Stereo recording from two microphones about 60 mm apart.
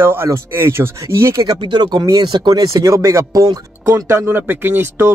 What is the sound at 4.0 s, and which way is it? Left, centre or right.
Speech, right.